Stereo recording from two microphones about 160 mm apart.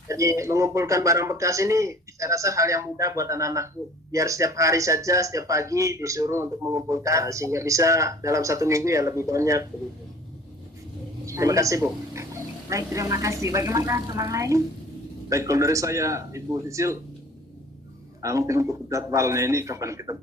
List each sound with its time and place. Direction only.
0.1 s speech: 20° right (ahead or behind)
11.3 s speech: 20° right (ahead or behind)
18.2 s speech: 20° right (ahead or behind)